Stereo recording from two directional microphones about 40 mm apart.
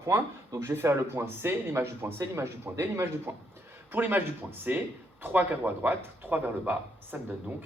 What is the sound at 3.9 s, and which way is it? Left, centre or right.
Speech, right.